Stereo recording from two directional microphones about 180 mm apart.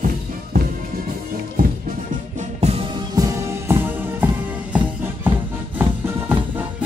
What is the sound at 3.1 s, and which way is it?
Music, 15° right (ahead or behind).